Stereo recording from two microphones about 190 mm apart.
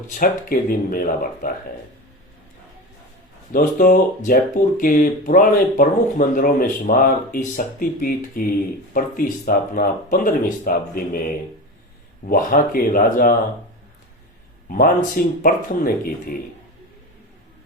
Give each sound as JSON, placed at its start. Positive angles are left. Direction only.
{"t": 0.1, "sound": "speech", "side_deg": 45}
{"t": 3.5, "sound": "speech", "side_deg": 45}
{"t": 12.3, "sound": "speech", "side_deg": 50}
{"t": 14.7, "sound": "speech", "side_deg": 45}